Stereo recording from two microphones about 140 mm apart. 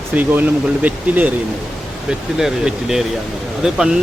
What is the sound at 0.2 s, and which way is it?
Speech, 10° right (ahead or behind).